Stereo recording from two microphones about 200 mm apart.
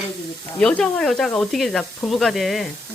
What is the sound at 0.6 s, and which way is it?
Speech, 5° left (ahead or behind).